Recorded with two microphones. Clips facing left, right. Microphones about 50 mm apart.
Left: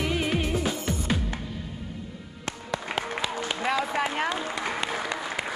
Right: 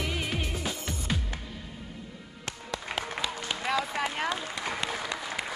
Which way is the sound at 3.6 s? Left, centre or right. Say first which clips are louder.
Left 3 dB; centre.